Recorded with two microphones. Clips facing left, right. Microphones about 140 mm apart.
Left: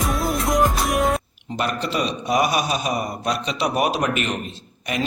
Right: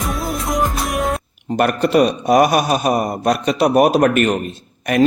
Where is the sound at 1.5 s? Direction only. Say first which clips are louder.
Right 10 dB; 55° right (ahead or behind).